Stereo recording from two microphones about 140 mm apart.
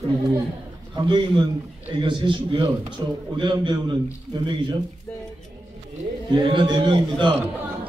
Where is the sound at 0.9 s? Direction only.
35° right (ahead or behind).